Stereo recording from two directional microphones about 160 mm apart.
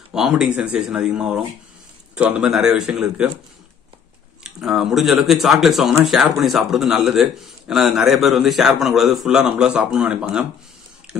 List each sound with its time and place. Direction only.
0.1 s a man's voice: 5° right (ahead or behind)
4.4 s a man's voice: 5° right (ahead or behind)